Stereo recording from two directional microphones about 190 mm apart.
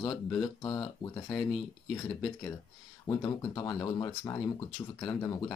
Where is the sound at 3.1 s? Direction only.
20° left (ahead or behind).